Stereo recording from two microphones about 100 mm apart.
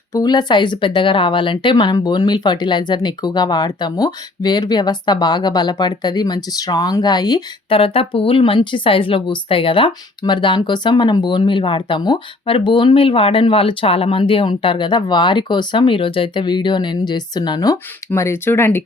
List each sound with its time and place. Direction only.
0.1 s a woman's voice: 40° left (ahead or behind)
7.7 s speech: 65° left (ahead or behind); by 17.7 s 40° left (ahead or behind)
18.1 s speech: 25° left (ahead or behind)